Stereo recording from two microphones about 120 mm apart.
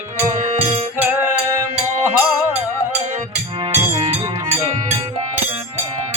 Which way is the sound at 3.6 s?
45° right (ahead or behind).